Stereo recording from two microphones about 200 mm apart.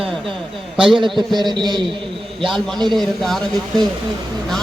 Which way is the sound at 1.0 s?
25° right (ahead or behind).